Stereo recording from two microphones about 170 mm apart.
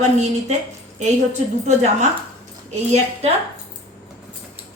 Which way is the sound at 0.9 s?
45° right (ahead or behind).